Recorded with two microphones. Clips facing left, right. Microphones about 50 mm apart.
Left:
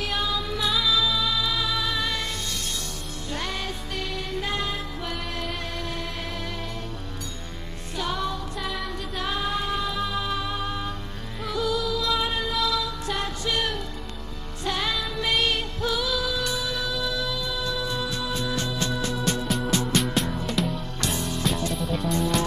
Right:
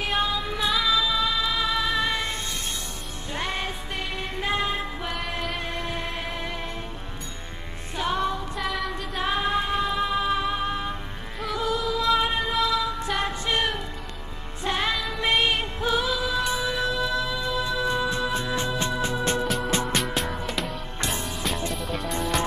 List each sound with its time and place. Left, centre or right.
0.0 s music: right
7.9 s music: right
8.5 s music: centre
8.9 s music: right
19.4 s music: centre
21.0 s music: right
21.3 s music: centre